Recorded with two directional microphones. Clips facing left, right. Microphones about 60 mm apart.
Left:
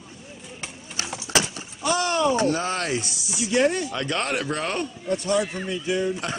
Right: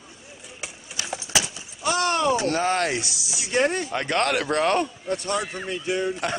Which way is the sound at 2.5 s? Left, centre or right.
Right.